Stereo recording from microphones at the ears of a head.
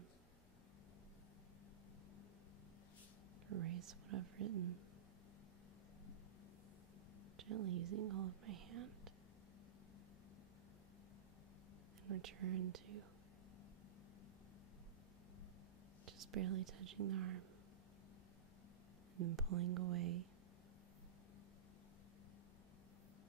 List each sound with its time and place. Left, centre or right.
3.4 s speech: right
7.3 s speech: right
12.1 s speech: right
16.1 s speech: right
19.1 s speech: right